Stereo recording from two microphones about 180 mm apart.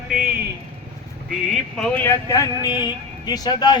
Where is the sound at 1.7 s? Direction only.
5° left (ahead or behind).